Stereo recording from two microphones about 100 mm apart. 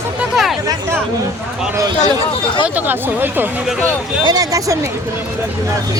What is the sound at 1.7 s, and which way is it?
Speech, 40° right (ahead or behind).